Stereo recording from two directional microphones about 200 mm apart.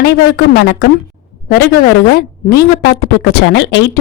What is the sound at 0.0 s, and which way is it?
Speech, 50° left (ahead or behind).